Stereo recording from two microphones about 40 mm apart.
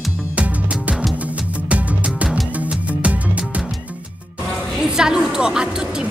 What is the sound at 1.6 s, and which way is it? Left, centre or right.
Music, right.